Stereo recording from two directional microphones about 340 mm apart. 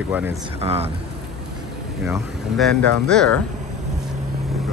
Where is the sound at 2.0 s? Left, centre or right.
Centre.